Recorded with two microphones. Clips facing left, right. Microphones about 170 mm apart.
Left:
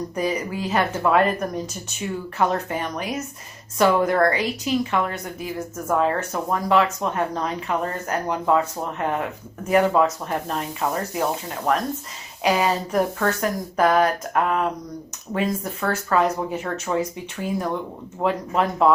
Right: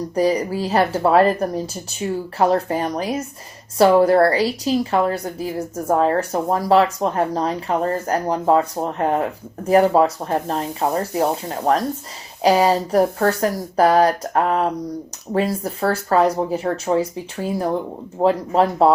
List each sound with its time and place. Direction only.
0.1 s a woman's voice: 35° right (ahead or behind)